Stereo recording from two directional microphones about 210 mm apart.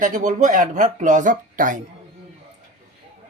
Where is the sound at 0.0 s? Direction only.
35° right (ahead or behind).